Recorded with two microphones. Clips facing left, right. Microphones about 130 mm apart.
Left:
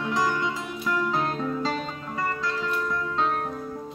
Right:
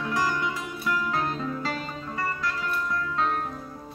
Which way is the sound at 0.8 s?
Centre (ahead or behind).